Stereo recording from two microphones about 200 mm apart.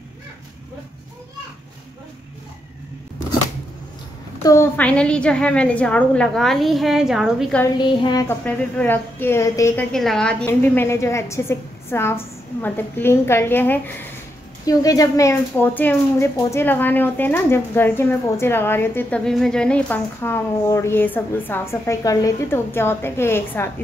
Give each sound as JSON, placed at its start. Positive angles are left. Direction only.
{"t": 4.4, "sound": "a woman's voice", "side_deg": 15}
{"t": 7.7, "sound": "a woman's voice", "side_deg": 20}
{"t": 8.5, "sound": "a woman's voice", "side_deg": 10}
{"t": 9.9, "sound": "a woman's voice", "side_deg": 5}